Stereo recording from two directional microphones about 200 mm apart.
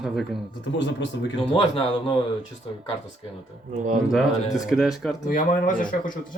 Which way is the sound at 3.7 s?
40° right (ahead or behind).